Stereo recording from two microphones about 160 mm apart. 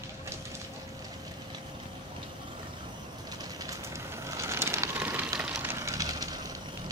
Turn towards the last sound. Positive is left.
turn(degrees=-25)  # may be behind; listen again after turning